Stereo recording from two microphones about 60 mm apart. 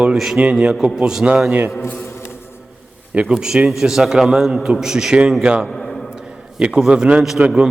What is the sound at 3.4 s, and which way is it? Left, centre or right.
A man's voice, centre.